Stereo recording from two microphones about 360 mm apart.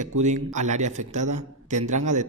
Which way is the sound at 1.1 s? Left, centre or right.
Right.